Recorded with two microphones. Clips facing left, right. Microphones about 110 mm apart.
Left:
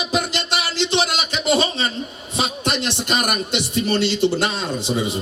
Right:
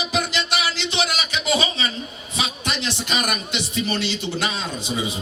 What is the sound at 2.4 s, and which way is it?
Music, 50° left (ahead or behind).